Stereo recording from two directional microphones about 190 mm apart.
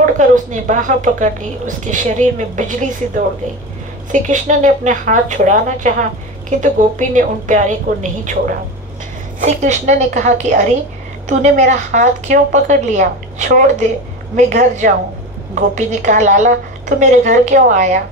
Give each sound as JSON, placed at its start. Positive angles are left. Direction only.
{"t": 0.0, "sound": "a woman's voice", "side_deg": -40}
{"t": 4.1, "sound": "a woman's voice", "side_deg": -40}
{"t": 9.4, "sound": "a woman's voice", "side_deg": -40}